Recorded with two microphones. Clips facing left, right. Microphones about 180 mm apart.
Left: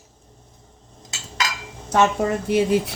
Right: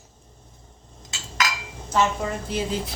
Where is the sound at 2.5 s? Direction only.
65° left (ahead or behind).